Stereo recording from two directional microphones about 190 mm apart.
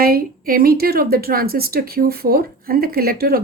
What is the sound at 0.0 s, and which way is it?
Speech, 50° right (ahead or behind).